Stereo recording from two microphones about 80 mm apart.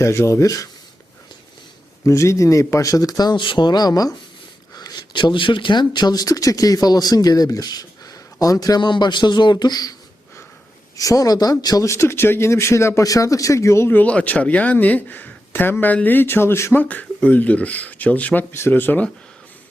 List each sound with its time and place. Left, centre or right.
0.0 s speech: left
2.0 s speech: left
3.3 s speech: left
8.8 s speech: left
10.9 s speech: left
11.9 s speech: left
13.9 s speech: centre
16.9 s speech: centre